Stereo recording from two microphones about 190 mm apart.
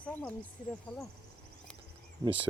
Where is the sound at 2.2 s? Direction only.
15° right (ahead or behind).